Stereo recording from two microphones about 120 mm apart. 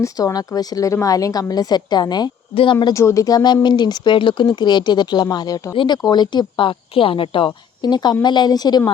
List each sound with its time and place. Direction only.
0.0 s speech: 30° left (ahead or behind)
2.9 s speech: 25° left (ahead or behind)